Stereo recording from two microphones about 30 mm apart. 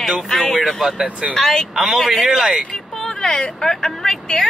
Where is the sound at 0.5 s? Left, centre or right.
Centre.